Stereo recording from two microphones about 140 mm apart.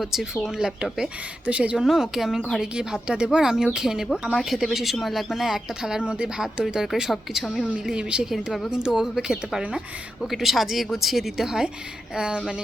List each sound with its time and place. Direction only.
0.0 s speech: centre (ahead or behind)